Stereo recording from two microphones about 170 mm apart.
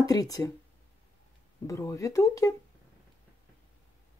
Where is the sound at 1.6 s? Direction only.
20° left (ahead or behind).